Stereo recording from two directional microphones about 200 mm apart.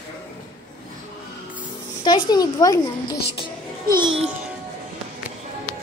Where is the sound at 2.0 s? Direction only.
20° left (ahead or behind).